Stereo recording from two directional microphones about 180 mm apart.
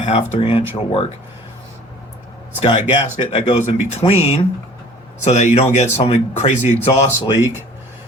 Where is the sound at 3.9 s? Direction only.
35° left (ahead or behind).